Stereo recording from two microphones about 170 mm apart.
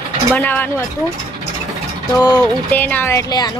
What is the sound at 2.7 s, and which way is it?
Speech, 10° left (ahead or behind).